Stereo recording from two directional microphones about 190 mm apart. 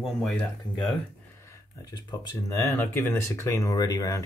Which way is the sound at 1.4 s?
15° left (ahead or behind).